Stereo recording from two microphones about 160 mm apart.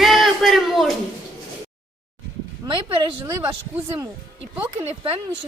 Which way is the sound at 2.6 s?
30° right (ahead or behind).